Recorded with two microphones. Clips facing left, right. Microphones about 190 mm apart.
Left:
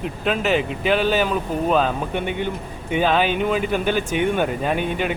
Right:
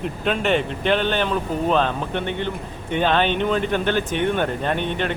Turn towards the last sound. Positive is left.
turn(degrees=10)  # may be behind; listen again after turning